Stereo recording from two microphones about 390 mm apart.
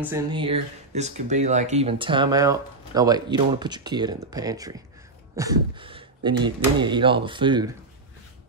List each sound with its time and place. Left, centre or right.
0.0 s speech: centre